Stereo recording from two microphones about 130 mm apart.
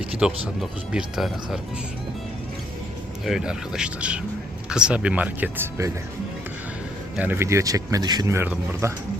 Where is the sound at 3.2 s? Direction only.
5° right (ahead or behind).